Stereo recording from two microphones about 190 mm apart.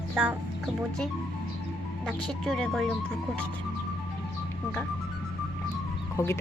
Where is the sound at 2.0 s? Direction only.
5° left (ahead or behind).